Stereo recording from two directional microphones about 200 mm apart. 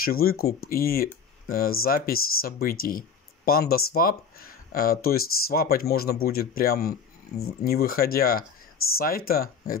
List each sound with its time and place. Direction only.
0.0 s speech: 50° left (ahead or behind)